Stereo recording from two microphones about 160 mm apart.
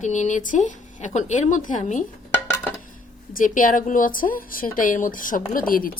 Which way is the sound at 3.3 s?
60° left (ahead or behind).